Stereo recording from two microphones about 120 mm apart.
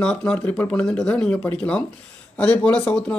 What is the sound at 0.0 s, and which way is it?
Speech, 10° left (ahead or behind).